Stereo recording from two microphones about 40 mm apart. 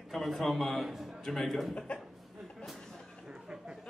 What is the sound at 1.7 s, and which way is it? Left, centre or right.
Speech, left.